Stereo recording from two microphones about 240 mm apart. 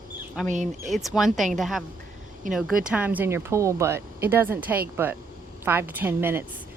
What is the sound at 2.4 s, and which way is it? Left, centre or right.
Speech, right.